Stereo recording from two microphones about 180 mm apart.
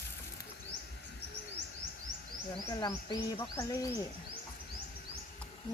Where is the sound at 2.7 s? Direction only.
25° left (ahead or behind).